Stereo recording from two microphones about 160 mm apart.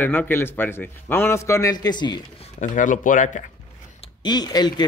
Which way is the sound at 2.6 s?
55° left (ahead or behind).